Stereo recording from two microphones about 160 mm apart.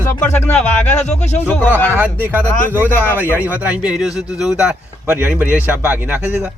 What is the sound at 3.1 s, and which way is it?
A man's voice, 10° right (ahead or behind).